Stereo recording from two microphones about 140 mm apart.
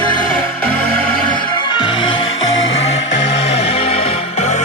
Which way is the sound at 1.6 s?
35° left (ahead or behind).